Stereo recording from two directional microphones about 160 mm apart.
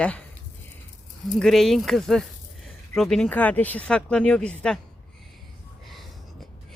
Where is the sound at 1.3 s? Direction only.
Centre (ahead or behind).